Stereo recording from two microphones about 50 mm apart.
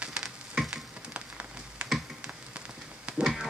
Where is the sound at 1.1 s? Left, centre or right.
Right.